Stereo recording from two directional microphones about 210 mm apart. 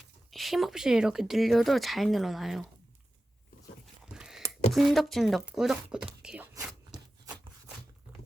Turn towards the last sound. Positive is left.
turn(degrees=-5)  # may be behind; listen again after turning